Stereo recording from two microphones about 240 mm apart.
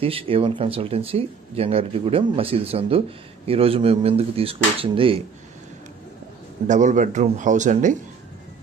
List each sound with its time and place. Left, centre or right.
0.0 s speech: right
6.7 s a man's voice: right